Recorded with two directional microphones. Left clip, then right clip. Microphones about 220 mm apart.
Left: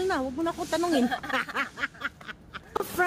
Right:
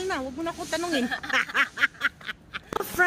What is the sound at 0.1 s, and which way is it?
Speech, 20° left (ahead or behind).